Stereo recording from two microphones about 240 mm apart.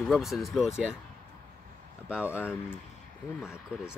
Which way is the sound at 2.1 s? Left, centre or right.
Centre.